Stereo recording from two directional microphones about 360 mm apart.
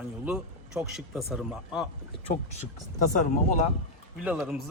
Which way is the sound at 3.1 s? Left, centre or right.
Left.